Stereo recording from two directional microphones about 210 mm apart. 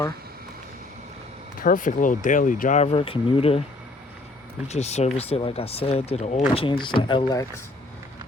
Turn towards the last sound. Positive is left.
turn(degrees=20)  # may be behind; listen again after turning